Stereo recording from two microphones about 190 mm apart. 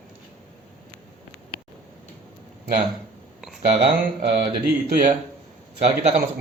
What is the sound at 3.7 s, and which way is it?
Speech, 30° right (ahead or behind).